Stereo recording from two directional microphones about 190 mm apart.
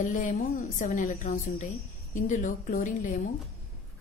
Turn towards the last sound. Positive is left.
turn(degrees=45)  # may be behind; listen again after turning